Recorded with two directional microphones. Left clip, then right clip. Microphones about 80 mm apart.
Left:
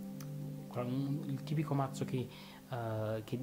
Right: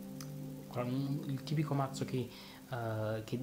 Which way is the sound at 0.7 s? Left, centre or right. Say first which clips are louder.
Right 1 dB; left.